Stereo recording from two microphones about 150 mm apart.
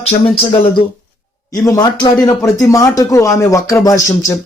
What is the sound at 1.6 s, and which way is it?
Speech, 25° left (ahead or behind).